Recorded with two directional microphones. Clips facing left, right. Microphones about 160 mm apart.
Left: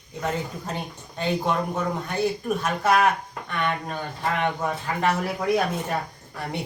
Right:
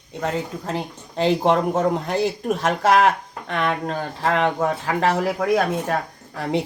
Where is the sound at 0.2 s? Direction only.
90° right.